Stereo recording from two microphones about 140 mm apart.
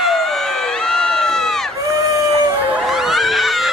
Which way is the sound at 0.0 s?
Centre (ahead or behind).